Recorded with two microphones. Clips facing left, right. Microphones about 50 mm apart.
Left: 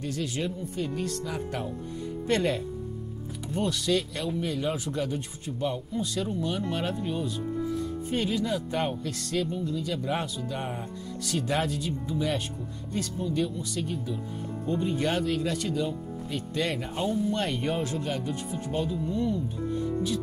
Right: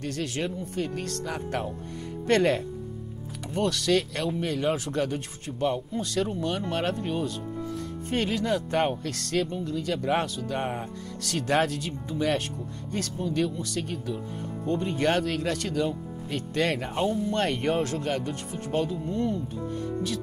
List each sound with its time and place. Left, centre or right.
0.0 s speech: right
19.7 s speech: right